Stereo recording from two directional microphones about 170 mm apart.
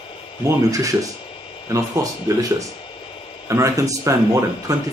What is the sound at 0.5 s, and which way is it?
Speech, 20° right (ahead or behind).